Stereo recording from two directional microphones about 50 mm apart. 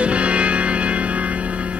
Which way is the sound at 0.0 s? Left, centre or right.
Right.